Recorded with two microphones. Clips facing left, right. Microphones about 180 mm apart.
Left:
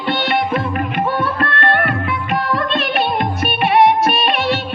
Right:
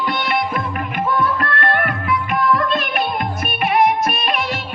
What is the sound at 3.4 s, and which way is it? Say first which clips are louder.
Music of bollywood: left 4 dB; 35° left (ahead or behind).